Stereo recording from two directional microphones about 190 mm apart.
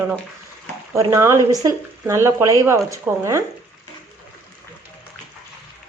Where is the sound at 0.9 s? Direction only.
15° right (ahead or behind).